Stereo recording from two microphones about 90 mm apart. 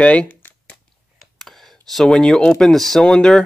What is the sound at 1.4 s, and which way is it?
Speech, centre (ahead or behind).